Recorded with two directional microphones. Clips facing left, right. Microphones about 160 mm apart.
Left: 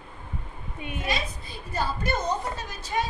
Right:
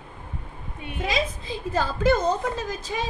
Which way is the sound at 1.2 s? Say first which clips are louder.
Right 7 dB; 90° right.